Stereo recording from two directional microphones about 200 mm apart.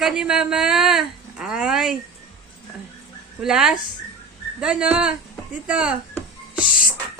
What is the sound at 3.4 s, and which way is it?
Speech, 5° right (ahead or behind).